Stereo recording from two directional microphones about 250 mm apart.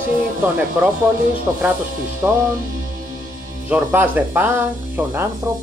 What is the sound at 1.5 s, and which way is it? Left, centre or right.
Speech, centre.